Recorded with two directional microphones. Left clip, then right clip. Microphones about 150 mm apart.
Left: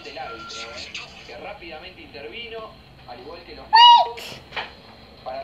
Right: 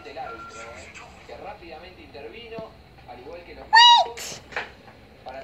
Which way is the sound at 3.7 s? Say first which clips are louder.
Left 2 dB; 10° right (ahead or behind).